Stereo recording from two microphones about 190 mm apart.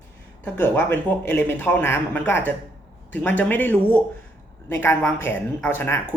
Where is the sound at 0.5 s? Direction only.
10° left (ahead or behind).